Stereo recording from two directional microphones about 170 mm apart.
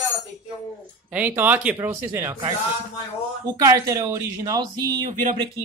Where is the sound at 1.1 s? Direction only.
10° right (ahead or behind).